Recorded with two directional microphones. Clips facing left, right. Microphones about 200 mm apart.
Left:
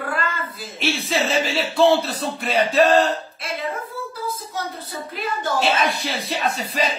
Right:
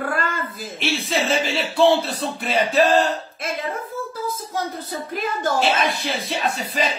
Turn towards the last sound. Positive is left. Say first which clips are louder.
# even
turn(degrees=0)  # may be behind; listen again after turning